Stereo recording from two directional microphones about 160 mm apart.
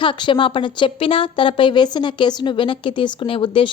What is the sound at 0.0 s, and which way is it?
A woman's voice, 30° left (ahead or behind).